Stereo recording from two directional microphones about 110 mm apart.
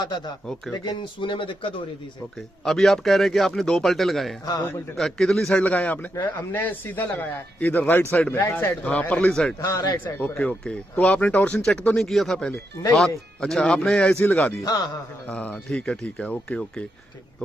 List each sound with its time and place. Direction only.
0.7 s speech: 40° left (ahead or behind)
2.6 s speech: centre (ahead or behind)
9.6 s a man's voice: 35° left (ahead or behind)
10.0 s speech: 20° left (ahead or behind)
14.6 s a man's voice: 35° left (ahead or behind)
15.3 s speech: 10° left (ahead or behind)